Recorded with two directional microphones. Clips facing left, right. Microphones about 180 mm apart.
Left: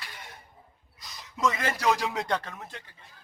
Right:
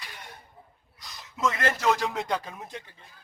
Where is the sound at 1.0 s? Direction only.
Centre (ahead or behind).